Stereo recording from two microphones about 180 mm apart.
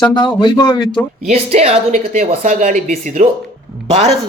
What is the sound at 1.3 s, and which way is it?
Speech, 35° right (ahead or behind).